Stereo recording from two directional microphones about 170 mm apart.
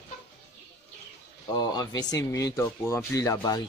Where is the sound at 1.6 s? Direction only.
25° left (ahead or behind).